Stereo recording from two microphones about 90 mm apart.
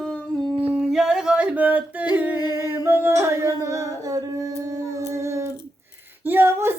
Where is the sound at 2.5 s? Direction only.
30° right (ahead or behind).